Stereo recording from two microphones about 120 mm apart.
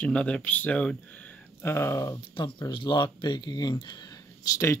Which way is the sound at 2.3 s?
40° left (ahead or behind).